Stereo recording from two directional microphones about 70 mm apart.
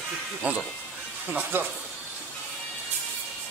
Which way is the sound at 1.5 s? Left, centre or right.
Right.